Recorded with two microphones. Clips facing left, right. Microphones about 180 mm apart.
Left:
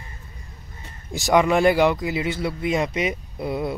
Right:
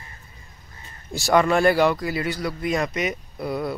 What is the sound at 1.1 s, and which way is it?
Speech, 15° left (ahead or behind).